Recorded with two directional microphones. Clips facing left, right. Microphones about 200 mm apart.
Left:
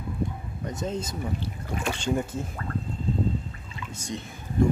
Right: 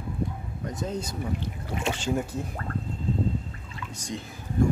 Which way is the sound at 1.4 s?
25° right (ahead or behind).